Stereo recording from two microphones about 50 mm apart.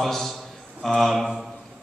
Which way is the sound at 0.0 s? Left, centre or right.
Centre.